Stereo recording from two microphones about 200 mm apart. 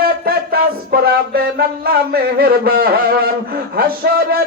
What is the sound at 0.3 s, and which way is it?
Music, 50° right (ahead or behind).